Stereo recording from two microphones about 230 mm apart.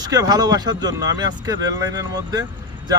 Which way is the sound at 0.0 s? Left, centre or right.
Centre.